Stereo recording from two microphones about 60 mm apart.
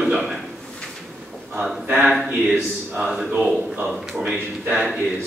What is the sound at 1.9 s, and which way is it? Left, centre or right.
Speech, centre.